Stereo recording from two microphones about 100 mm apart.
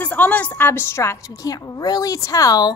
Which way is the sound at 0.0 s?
15° left (ahead or behind).